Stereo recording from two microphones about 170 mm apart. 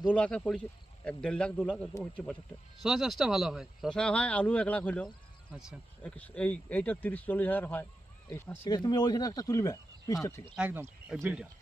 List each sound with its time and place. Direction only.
0.1 s speech: 5° left (ahead or behind)
1.9 s speech: 20° left (ahead or behind)
2.8 s speech: centre (ahead or behind)
5.5 s speech: 5° right (ahead or behind)
6.0 s speech: 10° left (ahead or behind)
10.5 s speech: 10° right (ahead or behind)